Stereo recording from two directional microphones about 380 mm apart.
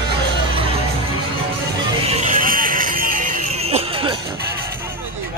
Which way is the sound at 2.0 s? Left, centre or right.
Centre.